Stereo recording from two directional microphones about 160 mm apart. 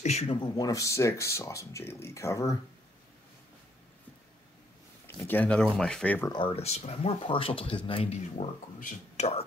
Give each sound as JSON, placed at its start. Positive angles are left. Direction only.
{"t": 0.0, "sound": "speech", "side_deg": 40}
{"t": 0.6, "sound": "speech", "side_deg": 20}
{"t": 5.0, "sound": "speech", "side_deg": 15}
{"t": 6.3, "sound": "speech", "side_deg": 35}